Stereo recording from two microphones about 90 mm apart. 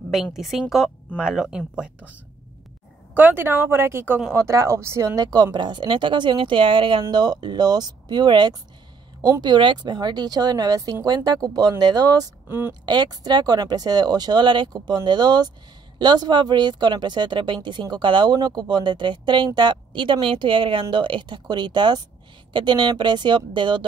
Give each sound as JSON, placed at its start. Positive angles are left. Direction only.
{"t": 0.1, "sound": "a woman's voice", "side_deg": -5}
{"t": 3.2, "sound": "speech", "side_deg": -25}
{"t": 5.2, "sound": "speech", "side_deg": -45}
{"t": 12.4, "sound": "a woman's voice", "side_deg": -25}
{"t": 12.8, "sound": "speech", "side_deg": -55}